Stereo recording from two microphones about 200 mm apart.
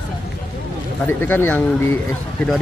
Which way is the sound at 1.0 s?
10° left (ahead or behind).